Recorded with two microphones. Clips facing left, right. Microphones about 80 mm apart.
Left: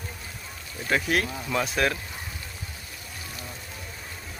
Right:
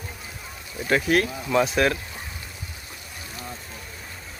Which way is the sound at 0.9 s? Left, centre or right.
Centre.